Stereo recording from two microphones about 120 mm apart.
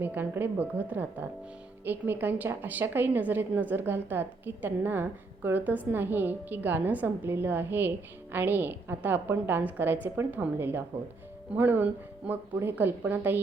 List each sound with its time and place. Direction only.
0.0 s a woman's voice: 15° right (ahead or behind)